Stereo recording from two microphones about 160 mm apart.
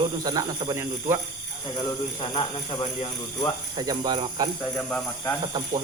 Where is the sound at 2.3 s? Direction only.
30° left (ahead or behind).